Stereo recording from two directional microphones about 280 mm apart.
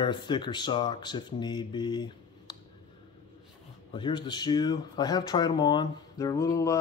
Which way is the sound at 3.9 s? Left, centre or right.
Centre.